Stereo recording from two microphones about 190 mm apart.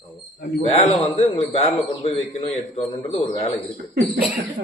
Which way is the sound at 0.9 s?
30° left (ahead or behind).